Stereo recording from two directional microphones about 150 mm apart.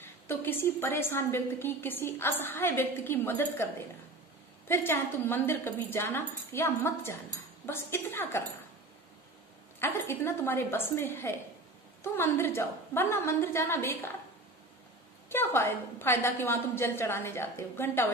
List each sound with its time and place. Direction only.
0.0 s a woman's voice: 15° left (ahead or behind)
4.6 s a woman's voice: 15° left (ahead or behind)
9.8 s a woman's voice: 15° left (ahead or behind)
15.2 s a woman's voice: 15° left (ahead or behind)